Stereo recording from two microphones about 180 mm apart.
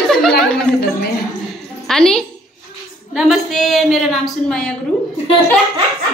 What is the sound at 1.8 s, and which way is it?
Child singing, 5° left (ahead or behind).